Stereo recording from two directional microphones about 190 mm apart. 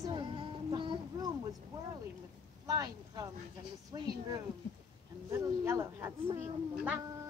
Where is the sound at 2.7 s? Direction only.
20° right (ahead or behind).